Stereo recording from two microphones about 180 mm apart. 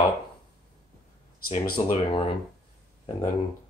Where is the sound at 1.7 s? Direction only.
30° left (ahead or behind).